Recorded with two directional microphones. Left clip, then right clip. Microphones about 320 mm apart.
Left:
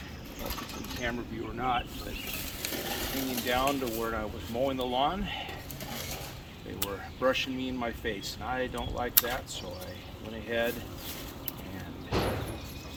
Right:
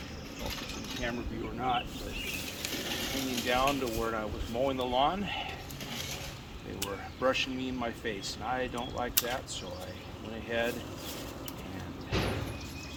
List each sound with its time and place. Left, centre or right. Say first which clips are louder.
1.5 s speech: left 1 dB; centre
2.7 s a sound: left 1 dB; centre
3.4 s speech: even; centre
6.7 s speech: left 1 dB; centre
10.5 s speech: left 2 dB; centre
12.1 s a sound: left 2 dB; centre